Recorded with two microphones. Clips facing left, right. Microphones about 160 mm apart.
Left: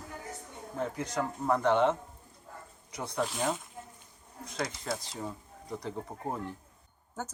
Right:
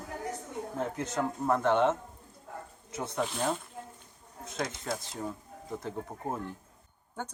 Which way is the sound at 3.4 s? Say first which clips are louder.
Right 2 dB; 10° left (ahead or behind).